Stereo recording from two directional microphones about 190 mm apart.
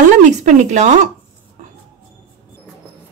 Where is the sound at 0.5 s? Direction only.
40° right (ahead or behind).